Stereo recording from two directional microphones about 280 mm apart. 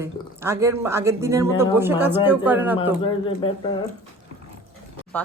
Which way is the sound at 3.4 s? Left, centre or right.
Centre.